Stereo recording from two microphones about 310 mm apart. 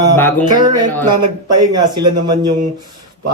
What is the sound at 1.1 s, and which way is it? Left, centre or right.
Speech, right.